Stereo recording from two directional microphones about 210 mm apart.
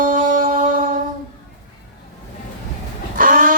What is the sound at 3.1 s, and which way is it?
Vehicle, 40° right (ahead or behind).